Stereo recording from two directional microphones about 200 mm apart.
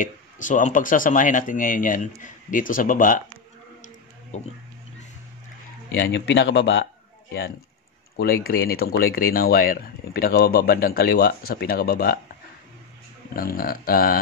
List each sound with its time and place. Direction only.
0.0 s speech: 40° left (ahead or behind)
4.3 s speech: 35° left (ahead or behind)
5.9 s speech: 60° left (ahead or behind)
8.2 s speech: 50° left (ahead or behind)
13.3 s speech: 45° left (ahead or behind)